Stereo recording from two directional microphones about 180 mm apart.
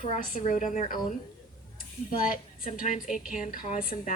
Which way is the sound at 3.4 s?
50° left (ahead or behind).